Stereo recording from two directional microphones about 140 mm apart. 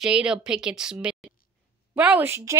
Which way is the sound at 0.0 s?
5° right (ahead or behind).